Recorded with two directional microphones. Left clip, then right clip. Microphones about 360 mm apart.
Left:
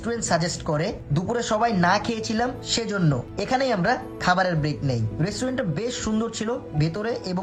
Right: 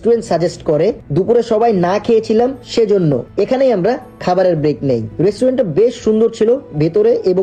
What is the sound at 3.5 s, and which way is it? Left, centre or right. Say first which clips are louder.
Speech: right 8 dB; centre.